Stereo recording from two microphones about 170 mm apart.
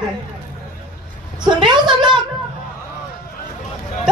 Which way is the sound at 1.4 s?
25° right (ahead or behind).